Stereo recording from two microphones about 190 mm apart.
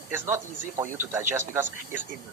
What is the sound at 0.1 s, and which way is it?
Speech, 10° right (ahead or behind).